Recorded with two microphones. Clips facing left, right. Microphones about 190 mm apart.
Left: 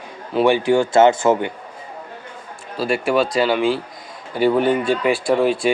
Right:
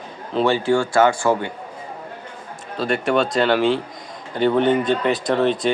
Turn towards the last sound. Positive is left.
turn(degrees=10)  # may be behind; listen again after turning